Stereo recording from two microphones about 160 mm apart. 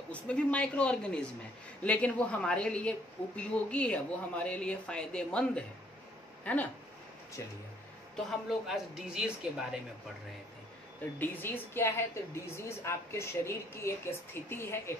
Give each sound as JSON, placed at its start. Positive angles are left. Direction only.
{"t": 0.1, "sound": "a woman's voice", "side_deg": 10}
{"t": 8.5, "sound": "speech", "side_deg": 0}
{"t": 11.1, "sound": "a woman's voice", "side_deg": 10}